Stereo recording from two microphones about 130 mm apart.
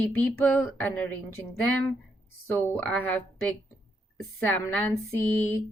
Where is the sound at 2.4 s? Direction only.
15° left (ahead or behind).